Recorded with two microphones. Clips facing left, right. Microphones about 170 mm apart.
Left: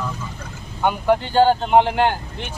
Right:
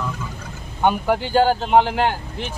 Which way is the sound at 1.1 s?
5° right (ahead or behind).